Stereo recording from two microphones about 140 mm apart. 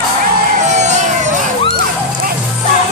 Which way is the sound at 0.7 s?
55° right (ahead or behind).